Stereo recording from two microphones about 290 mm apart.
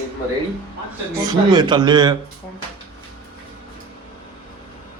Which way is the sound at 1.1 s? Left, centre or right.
Centre.